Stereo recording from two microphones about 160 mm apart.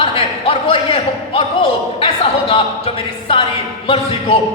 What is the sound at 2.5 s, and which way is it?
A man's voice, 35° left (ahead or behind).